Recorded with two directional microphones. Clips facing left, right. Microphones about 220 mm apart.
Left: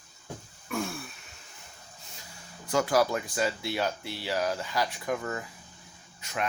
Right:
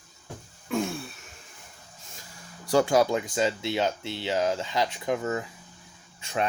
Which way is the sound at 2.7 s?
25° right (ahead or behind).